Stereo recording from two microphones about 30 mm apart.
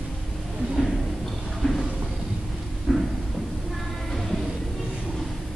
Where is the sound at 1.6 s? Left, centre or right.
Centre.